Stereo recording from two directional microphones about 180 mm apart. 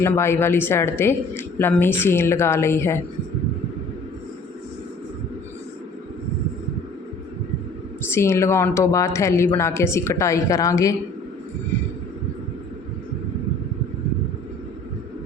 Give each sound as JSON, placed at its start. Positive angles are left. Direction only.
{"t": 0.0, "sound": "a woman's voice", "side_deg": 15}
{"t": 8.0, "sound": "a woman's voice", "side_deg": 15}